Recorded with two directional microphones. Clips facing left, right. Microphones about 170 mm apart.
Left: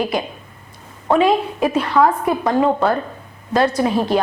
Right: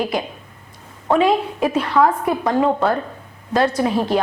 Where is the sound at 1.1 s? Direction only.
10° left (ahead or behind).